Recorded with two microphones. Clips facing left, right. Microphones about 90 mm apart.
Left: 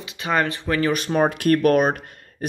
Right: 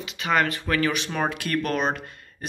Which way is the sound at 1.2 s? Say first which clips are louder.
Left 10 dB; 55° left (ahead or behind).